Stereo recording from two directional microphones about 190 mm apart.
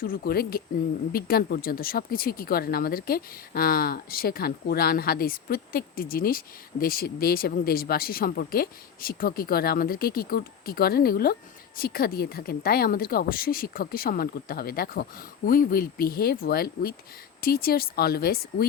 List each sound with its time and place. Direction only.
0.0 s speech: 50° left (ahead or behind)